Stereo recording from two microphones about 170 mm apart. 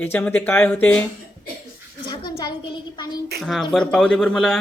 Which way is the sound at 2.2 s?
25° left (ahead or behind).